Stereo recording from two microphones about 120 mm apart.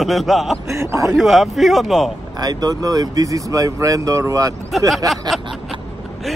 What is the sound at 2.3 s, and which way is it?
Speech, 35° right (ahead or behind).